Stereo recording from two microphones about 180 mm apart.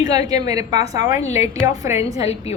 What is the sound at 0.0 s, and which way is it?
A woman's voice, 20° right (ahead or behind).